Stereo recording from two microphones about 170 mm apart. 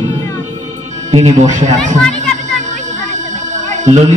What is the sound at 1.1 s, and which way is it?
Mantra, 45° right (ahead or behind).